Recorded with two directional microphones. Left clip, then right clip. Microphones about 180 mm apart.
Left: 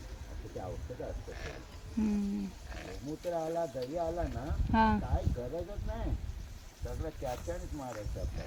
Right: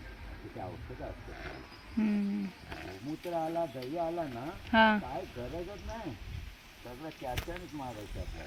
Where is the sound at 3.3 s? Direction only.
20° left (ahead or behind).